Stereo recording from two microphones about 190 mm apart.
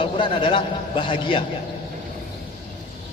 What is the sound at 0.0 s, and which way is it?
A man's voice, 25° left (ahead or behind).